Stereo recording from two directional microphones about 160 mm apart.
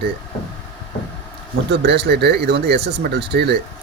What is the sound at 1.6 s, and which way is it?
Speech, 90° right.